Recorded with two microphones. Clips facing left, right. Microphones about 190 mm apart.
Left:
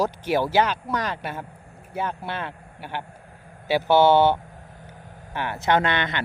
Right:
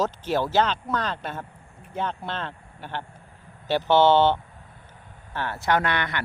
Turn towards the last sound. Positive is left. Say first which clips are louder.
# left 2 dB
turn(degrees=20)  # may be behind; listen again after turning